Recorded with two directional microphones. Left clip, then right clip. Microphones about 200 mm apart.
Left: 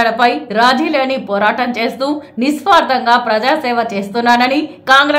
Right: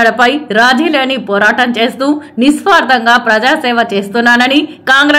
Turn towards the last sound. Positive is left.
turn(degrees=-15)  # may be behind; listen again after turning